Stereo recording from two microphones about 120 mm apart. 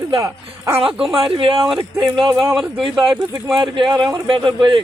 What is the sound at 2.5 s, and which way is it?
Speech, centre (ahead or behind).